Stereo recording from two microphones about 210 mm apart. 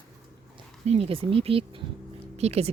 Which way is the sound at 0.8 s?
30° right (ahead or behind).